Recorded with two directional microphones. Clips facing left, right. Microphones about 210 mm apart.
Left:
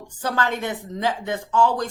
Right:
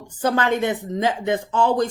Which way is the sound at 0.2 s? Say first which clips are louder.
Right 5 dB; 20° right (ahead or behind).